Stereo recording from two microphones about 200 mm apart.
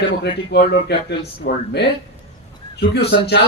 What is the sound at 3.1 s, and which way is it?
Speech, 60° left (ahead or behind).